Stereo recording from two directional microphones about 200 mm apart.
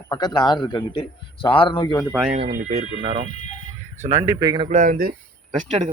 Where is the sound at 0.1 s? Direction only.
20° left (ahead or behind).